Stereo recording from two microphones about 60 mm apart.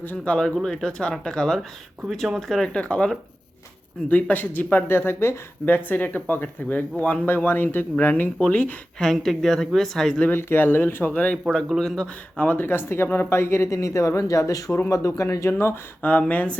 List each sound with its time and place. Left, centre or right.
0.0 s speech: left
0.3 s speech: centre
2.0 s speech: centre
2.6 s speech: centre
4.1 s speech: left
9.1 s speech: centre
10.3 s speech: left
11.1 s speech: left
11.8 s speech: centre
12.4 s speech: left
15.2 s speech: left
15.5 s speech: left
16.0 s speech: left